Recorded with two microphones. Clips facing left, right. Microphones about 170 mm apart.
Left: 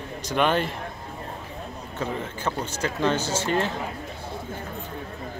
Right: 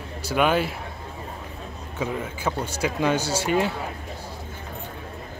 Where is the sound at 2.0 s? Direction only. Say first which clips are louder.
Right 2 dB; 10° right (ahead or behind).